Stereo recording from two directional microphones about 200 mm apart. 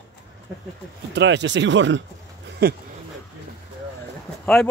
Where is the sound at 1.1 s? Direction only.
60° right (ahead or behind).